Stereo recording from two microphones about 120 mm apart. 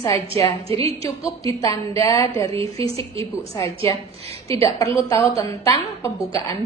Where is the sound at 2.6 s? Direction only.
55° right (ahead or behind).